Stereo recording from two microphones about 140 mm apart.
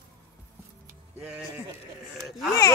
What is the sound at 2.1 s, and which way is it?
Speech, centre (ahead or behind).